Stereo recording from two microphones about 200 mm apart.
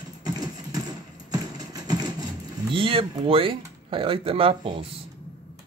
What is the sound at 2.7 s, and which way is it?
Speech, 25° right (ahead or behind).